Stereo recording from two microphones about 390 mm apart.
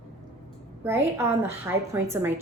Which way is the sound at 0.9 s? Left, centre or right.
Centre.